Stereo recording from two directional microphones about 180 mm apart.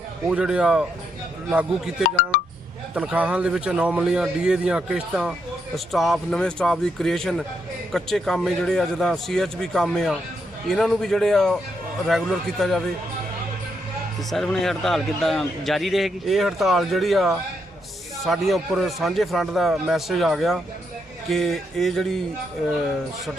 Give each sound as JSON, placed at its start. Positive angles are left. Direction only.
{"t": 0.3, "sound": "a man's voice", "side_deg": -5}
{"t": 2.0, "sound": "speech", "side_deg": 55}
{"t": 2.9, "sound": "a man's voice", "side_deg": -5}
{"t": 14.3, "sound": "a man's voice", "side_deg": 0}